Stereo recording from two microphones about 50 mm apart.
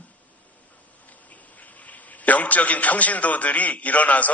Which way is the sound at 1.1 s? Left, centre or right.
Left.